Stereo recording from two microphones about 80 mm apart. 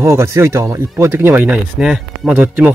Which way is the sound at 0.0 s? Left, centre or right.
Right.